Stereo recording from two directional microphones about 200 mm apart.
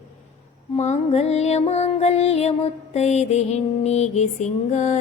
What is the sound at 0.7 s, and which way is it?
Music, 35° left (ahead or behind).